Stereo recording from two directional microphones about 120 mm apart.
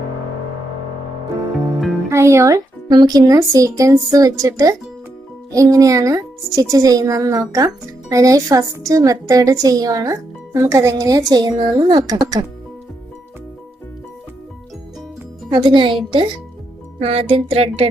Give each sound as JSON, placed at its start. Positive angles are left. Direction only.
{"t": 2.0, "sound": "a woman's voice", "side_deg": -25}
{"t": 15.4, "sound": "speech", "side_deg": -40}
{"t": 17.0, "sound": "a sound", "side_deg": -55}